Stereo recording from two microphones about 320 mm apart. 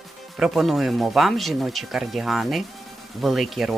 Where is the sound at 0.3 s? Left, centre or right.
Centre.